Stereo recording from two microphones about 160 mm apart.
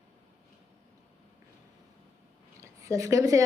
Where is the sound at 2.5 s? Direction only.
20° right (ahead or behind).